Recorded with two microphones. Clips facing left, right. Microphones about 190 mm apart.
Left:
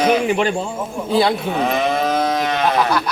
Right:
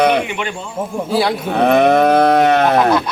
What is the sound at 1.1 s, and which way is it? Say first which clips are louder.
Speech: left 1 dB; 5° right (ahead or behind).